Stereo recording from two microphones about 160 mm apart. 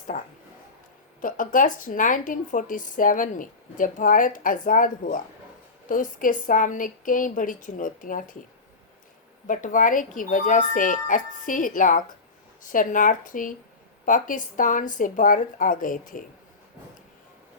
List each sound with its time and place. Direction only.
0.1 s speech: 45° left (ahead or behind)
1.2 s a woman's voice: 55° left (ahead or behind)
9.5 s a woman's voice: 55° left (ahead or behind)